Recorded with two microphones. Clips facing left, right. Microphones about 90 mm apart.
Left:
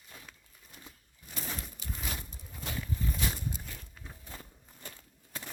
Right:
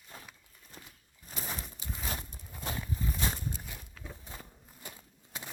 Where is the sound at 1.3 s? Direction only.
40° right (ahead or behind).